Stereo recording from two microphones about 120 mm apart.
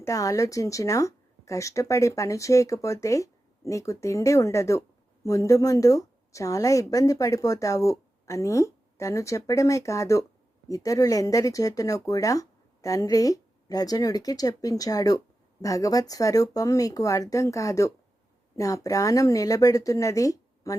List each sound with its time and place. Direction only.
0.0 s a woman's voice: 30° left (ahead or behind)